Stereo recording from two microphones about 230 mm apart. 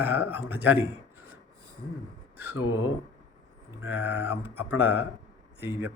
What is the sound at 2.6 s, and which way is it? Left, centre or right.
Speech, left.